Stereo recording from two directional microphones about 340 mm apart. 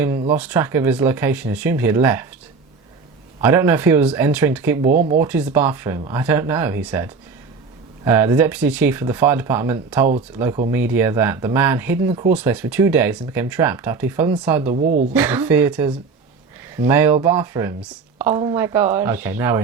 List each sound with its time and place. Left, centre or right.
0.3 s speech: centre
3.4 s speech: centre
14.8 s speech: right
15.1 s a woman's voice: centre